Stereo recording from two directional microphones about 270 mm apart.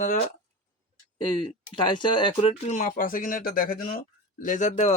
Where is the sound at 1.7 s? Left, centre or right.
Centre.